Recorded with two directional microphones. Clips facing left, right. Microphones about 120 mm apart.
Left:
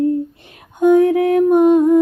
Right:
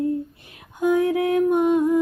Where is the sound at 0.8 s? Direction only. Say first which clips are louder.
Left 8 dB; 25° left (ahead or behind).